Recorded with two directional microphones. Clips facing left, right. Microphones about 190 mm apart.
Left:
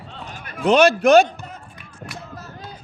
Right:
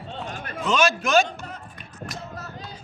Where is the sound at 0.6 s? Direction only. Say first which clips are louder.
Left 8 dB; 60° left (ahead or behind).